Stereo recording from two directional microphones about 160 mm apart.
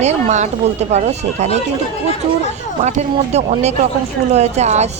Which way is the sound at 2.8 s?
45° right (ahead or behind).